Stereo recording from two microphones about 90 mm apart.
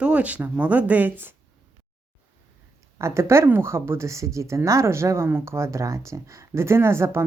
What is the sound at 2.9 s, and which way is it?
Speech, 30° right (ahead or behind).